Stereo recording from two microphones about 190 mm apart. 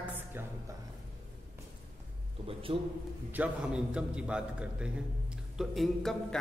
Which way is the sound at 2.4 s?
30° right (ahead or behind).